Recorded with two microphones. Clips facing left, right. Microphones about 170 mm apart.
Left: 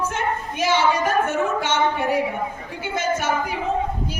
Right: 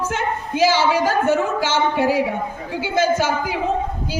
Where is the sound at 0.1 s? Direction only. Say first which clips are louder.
Right 2 dB; 90° right.